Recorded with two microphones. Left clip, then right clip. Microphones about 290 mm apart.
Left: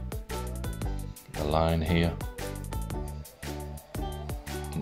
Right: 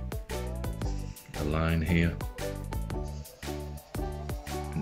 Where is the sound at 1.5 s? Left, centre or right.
Centre.